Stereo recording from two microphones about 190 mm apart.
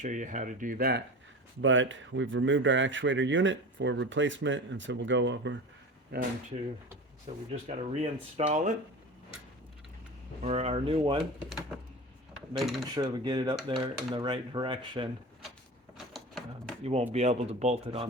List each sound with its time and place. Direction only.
0.0 s speech: 40° right (ahead or behind)
1.6 s speech: 85° right
6.1 s speech: 55° right (ahead or behind)
7.5 s speech: 35° right (ahead or behind)
10.4 s speech: 35° right (ahead or behind)
12.5 s speech: centre (ahead or behind)
12.9 s speech: 25° right (ahead or behind)
16.1 s a sound: centre (ahead or behind)
16.8 s speech: 35° right (ahead or behind)